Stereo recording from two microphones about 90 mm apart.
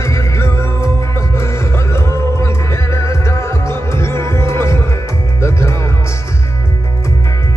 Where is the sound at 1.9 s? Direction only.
30° left (ahead or behind).